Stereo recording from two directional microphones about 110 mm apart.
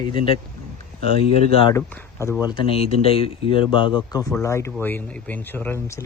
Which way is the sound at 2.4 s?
50° left (ahead or behind).